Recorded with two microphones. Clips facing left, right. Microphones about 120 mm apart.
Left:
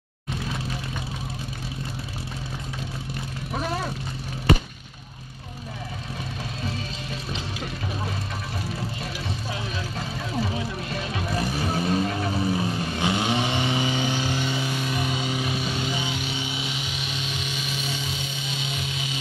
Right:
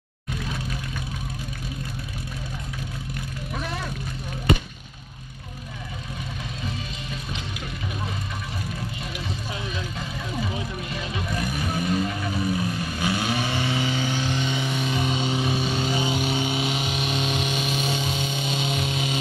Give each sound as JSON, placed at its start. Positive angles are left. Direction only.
{"t": 3.5, "sound": "vehicle", "side_deg": 35}
{"t": 11.2, "sound": "vehicle", "side_deg": 30}
{"t": 14.8, "sound": "music", "side_deg": -25}
{"t": 16.0, "sound": "a sound", "side_deg": -45}